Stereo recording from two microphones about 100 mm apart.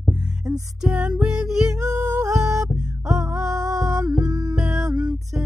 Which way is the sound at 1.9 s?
40° right (ahead or behind).